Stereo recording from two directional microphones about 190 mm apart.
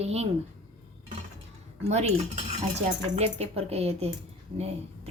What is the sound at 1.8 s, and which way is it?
Speech, 35° right (ahead or behind).